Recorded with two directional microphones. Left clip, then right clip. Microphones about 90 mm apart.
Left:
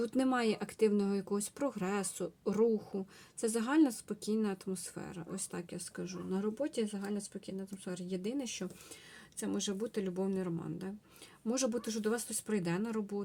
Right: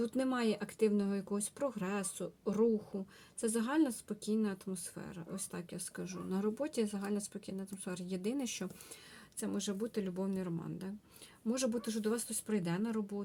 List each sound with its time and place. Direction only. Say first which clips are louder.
0.0 s speech: left 2 dB; 35° left (ahead or behind)
6.0 s speech: left 1 dB; 5° right (ahead or behind)
9.4 s speech: left 2 dB; 5° left (ahead or behind)
11.4 s speech: left 1 dB; 35° left (ahead or behind)